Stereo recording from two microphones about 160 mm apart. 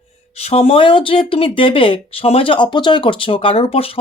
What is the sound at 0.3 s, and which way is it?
Speech, 40° left (ahead or behind).